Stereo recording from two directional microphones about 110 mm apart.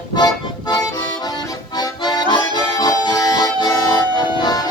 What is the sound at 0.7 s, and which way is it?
Music, 40° left (ahead or behind).